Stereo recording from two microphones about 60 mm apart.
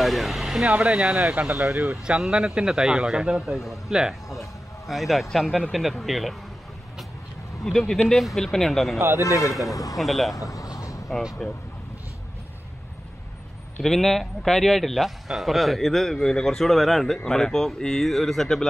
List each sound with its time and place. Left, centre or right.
0.0 s vehicle: centre
0.7 s a man's voice: centre
7.6 s speech: centre
9.4 s speech: left
9.9 s speech: centre
10.3 s a sound: left
11.4 s speech: centre
13.8 s speech: centre